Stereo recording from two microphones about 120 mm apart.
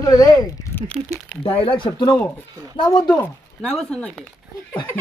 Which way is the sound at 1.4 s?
50° left (ahead or behind).